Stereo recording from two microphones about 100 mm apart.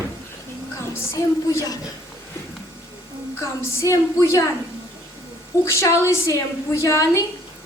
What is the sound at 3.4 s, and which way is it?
A woman's voice, 30° left (ahead or behind).